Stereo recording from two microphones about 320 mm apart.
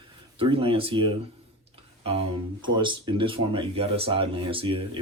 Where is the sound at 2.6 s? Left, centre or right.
Centre.